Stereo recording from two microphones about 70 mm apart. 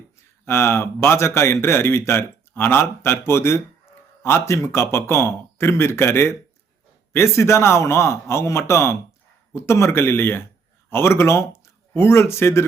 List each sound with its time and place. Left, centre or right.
0.4 s a man's voice: left